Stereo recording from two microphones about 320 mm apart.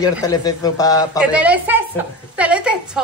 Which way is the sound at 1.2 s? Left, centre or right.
Centre.